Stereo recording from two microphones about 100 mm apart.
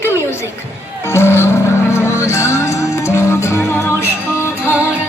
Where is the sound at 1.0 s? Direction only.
25° left (ahead or behind).